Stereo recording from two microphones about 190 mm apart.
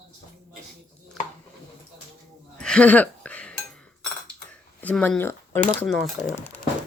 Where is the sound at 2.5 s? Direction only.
5° left (ahead or behind).